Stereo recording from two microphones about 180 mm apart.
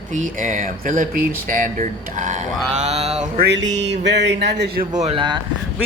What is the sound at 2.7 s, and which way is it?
Mantra, 35° right (ahead or behind).